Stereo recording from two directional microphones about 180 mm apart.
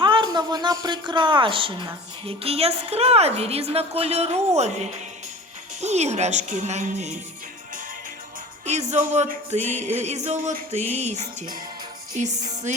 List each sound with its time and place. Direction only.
0.0 s a woman's voice: 25° right (ahead or behind); by 7.2 s 40° right (ahead or behind)
8.6 s a woman's voice: 40° right (ahead or behind)
12.1 s music: 40° right (ahead or behind)